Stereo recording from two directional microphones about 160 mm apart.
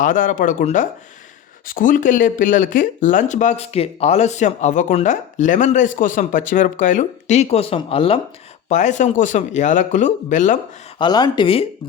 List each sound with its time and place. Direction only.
0.0 s speech: 55° left (ahead or behind); by 8.2 s 35° left (ahead or behind)
8.7 s speech: 50° left (ahead or behind)
10.9 s speech: 25° left (ahead or behind)